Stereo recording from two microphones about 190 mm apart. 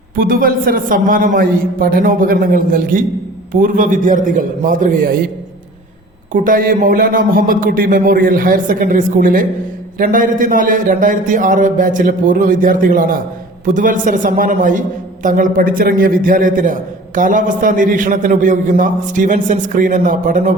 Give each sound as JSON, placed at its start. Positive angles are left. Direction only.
{"t": 0.2, "sound": "a man's voice", "side_deg": -50}
{"t": 6.3, "sound": "a man's voice", "side_deg": -45}